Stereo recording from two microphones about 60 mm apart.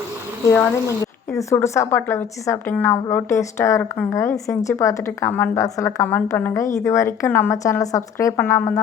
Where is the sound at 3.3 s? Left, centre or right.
Left.